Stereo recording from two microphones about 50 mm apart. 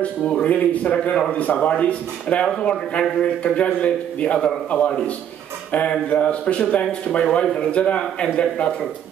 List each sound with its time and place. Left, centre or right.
0.0 s a man's voice: left